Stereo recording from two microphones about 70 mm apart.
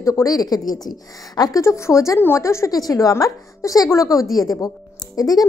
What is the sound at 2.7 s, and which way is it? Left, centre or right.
A woman's voice, left.